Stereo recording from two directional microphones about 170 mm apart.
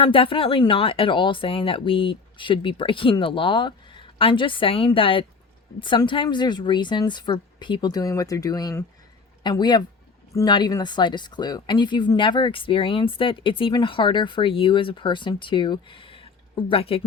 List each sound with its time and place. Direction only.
0.0 s speech: 30° left (ahead or behind)